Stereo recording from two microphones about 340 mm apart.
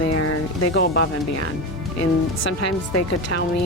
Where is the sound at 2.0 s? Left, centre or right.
Left.